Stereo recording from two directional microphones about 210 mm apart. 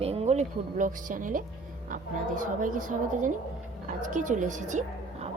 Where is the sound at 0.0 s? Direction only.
30° right (ahead or behind).